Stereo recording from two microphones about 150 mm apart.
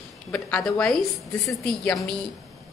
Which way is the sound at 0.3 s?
5° left (ahead or behind).